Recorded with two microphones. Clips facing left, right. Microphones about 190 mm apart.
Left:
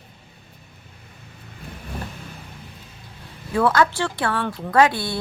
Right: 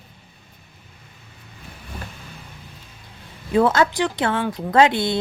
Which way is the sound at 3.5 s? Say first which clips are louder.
Right 2 dB; 20° right (ahead or behind).